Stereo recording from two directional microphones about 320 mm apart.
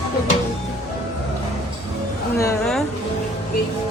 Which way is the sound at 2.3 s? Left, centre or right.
Centre.